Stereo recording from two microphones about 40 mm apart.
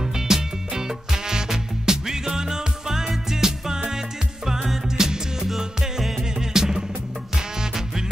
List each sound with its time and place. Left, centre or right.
0.0 s music: centre